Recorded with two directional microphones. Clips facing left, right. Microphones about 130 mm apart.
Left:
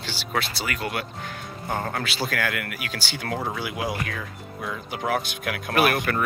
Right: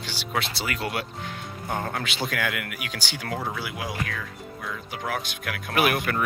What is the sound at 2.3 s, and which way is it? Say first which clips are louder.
Speech: left 1 dB; 15° right (ahead or behind).